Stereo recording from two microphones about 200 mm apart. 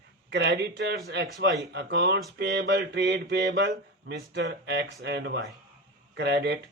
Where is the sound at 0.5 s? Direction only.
60° right (ahead or behind).